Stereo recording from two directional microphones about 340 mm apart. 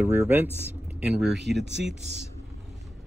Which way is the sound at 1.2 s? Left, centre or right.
Right.